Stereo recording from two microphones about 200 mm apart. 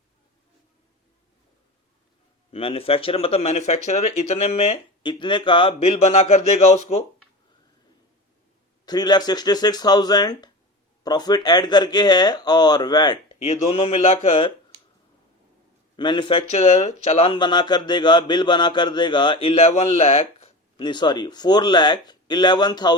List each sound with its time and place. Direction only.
2.5 s speech: 30° left (ahead or behind)
8.9 s speech: 20° left (ahead or behind)
16.0 s speech: 25° left (ahead or behind)